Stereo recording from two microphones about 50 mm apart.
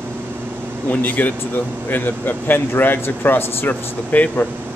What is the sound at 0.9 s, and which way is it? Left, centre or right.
Speech, left.